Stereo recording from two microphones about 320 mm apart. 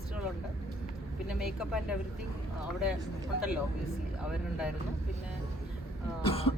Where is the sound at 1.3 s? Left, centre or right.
Centre.